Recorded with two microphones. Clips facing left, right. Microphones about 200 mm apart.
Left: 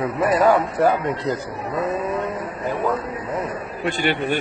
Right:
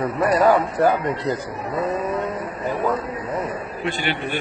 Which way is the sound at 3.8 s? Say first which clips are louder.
Left 4 dB; 45° left (ahead or behind).